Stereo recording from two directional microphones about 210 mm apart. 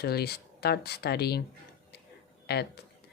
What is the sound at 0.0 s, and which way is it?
Speech, 50° left (ahead or behind).